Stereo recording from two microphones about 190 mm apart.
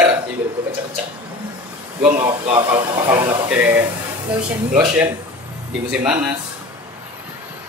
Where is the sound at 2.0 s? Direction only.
30° right (ahead or behind).